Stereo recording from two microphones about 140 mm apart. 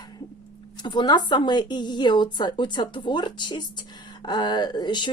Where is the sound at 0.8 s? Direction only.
30° left (ahead or behind).